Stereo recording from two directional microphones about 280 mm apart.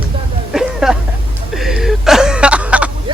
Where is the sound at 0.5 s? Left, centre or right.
Centre.